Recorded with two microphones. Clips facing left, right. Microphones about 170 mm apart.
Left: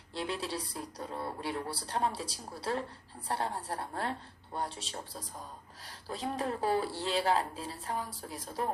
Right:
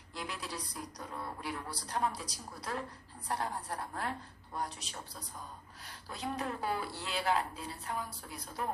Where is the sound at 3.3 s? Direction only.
30° left (ahead or behind).